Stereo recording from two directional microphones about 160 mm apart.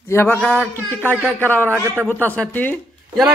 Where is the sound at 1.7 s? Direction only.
15° right (ahead or behind).